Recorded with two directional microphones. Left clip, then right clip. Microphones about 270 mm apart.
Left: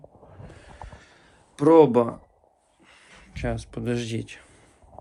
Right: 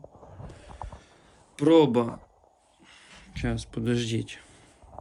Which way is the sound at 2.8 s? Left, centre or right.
Centre.